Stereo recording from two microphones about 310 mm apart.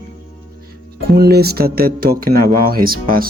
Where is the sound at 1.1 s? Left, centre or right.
Right.